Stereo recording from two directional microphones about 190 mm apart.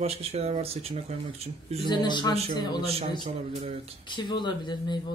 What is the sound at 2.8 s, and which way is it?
Speech, 30° right (ahead or behind).